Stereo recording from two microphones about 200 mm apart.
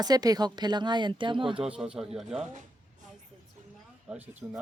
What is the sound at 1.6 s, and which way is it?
Speech, 5° right (ahead or behind).